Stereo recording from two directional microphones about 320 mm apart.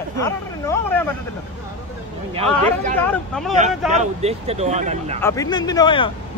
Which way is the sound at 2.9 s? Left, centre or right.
Centre.